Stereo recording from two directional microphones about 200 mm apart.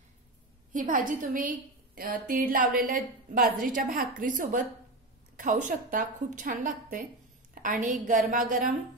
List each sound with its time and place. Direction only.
0.7 s a woman's voice: 40° right (ahead or behind)